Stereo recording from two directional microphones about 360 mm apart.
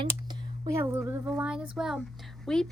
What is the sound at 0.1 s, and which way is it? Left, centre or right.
A woman's voice, centre.